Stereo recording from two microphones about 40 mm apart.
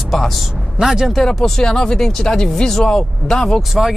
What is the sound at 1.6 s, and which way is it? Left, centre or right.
Speech, centre.